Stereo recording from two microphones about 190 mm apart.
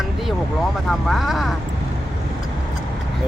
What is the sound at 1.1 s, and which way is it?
Speech, centre (ahead or behind).